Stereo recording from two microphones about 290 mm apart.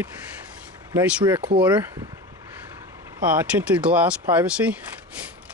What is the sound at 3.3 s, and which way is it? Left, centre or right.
Speech, centre.